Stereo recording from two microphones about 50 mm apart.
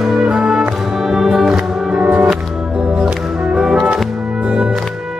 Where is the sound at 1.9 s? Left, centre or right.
Centre.